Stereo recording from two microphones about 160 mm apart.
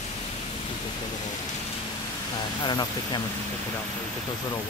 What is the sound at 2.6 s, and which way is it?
Speech, 25° left (ahead or behind).